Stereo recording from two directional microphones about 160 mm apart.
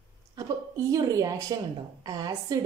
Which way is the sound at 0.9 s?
20° right (ahead or behind).